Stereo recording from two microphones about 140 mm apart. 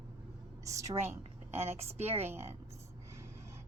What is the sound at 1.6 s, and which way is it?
Speech, 50° right (ahead or behind).